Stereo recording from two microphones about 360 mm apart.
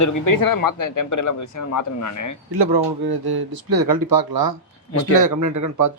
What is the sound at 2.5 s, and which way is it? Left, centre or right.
Speech, right.